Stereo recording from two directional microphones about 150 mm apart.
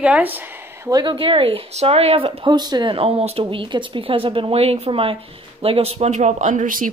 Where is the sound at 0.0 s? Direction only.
10° right (ahead or behind).